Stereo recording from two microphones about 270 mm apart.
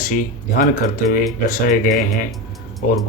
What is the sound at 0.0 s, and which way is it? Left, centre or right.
Speech, left.